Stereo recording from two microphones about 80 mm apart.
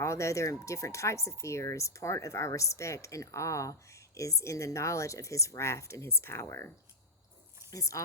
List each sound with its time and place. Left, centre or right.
0.0 s speech: left
7.7 s speech: left